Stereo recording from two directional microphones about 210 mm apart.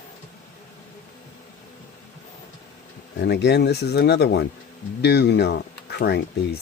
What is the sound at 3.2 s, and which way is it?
Speech, 55° left (ahead or behind).